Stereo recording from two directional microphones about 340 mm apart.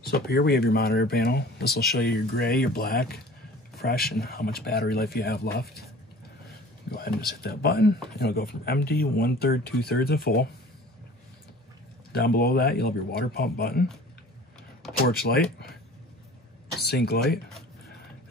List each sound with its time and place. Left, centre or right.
0.0 s speech: left
7.4 s speech: left
12.1 s speech: left
15.0 s speech: left
16.7 s speech: left